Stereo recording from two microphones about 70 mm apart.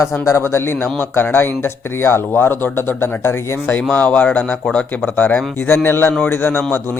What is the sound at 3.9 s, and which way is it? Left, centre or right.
Speech, left.